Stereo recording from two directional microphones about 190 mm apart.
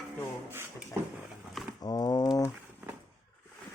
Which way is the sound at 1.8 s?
20° left (ahead or behind).